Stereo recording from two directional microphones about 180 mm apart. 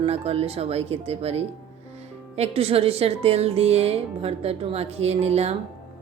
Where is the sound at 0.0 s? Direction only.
35° right (ahead or behind).